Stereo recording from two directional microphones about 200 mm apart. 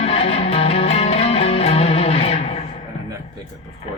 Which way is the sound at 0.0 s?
30° left (ahead or behind).